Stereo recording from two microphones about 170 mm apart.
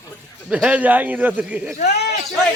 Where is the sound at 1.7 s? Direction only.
40° left (ahead or behind).